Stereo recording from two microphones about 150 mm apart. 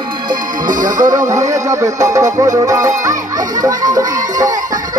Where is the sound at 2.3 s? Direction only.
25° right (ahead or behind).